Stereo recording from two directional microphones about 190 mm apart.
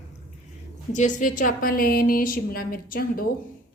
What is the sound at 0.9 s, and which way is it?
A woman's voice, 40° left (ahead or behind).